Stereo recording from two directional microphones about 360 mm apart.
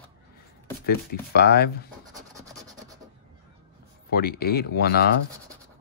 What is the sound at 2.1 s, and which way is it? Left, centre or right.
Rub, centre.